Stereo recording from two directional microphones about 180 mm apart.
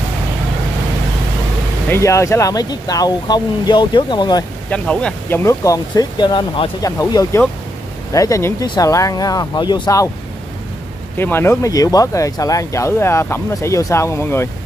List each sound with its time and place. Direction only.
1.9 s speech: 15° left (ahead or behind)
4.6 s speech: 5° left (ahead or behind)
5.4 s speech: 15° left (ahead or behind)
11.1 s speech: 10° left (ahead or behind)